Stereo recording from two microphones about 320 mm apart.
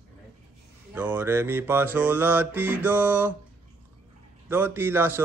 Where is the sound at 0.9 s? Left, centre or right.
Centre.